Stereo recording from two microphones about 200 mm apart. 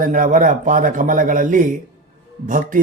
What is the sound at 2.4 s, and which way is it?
Mantra, 40° right (ahead or behind).